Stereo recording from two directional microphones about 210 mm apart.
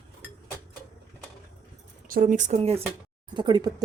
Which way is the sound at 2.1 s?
40° right (ahead or behind).